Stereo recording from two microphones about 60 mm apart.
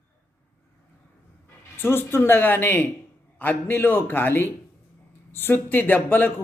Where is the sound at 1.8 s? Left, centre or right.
Left.